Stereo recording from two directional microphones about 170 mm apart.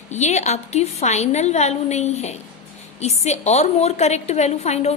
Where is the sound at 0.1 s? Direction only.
45° left (ahead or behind).